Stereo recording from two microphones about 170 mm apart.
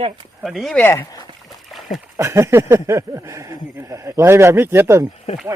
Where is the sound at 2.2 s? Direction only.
15° right (ahead or behind).